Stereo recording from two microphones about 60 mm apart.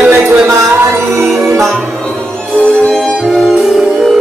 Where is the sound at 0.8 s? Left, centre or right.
Right.